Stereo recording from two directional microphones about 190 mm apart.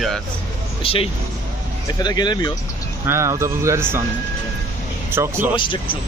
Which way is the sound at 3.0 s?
15° right (ahead or behind).